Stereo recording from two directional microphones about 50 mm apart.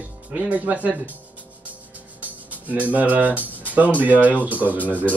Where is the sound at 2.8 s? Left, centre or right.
Right.